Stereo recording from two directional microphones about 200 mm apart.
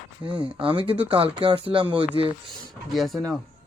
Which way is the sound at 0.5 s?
25° right (ahead or behind).